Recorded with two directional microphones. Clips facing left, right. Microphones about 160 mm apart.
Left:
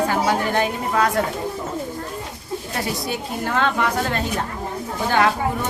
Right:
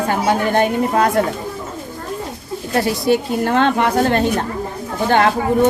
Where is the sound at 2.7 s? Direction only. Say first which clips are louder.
Right 11 dB; 65° right (ahead or behind).